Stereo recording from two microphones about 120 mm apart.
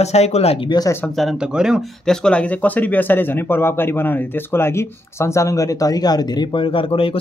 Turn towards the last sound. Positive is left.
turn(degrees=50)  # may be behind; listen again after turning